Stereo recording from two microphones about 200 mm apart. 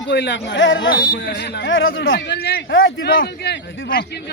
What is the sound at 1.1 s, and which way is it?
Speech, 55° left (ahead or behind).